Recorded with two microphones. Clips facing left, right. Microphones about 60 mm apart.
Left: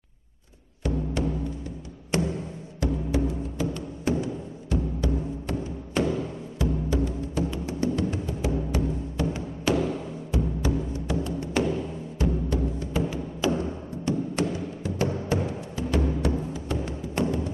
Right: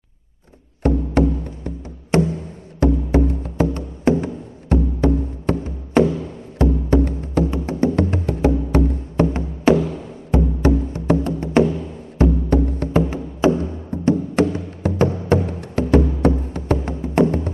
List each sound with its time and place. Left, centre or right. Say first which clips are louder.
0.8 s music: right 10 dB; right
13.1 s music: right 8 dB; right